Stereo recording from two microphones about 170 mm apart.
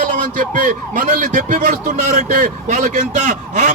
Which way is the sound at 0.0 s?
50° right (ahead or behind).